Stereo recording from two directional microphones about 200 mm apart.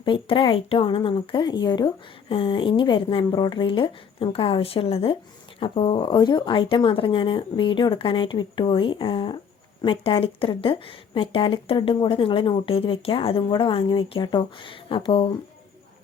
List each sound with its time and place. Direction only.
0.0 s a woman's voice: 25° left (ahead or behind)